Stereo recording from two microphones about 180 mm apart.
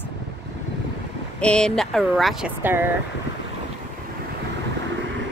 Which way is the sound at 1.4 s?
5° left (ahead or behind).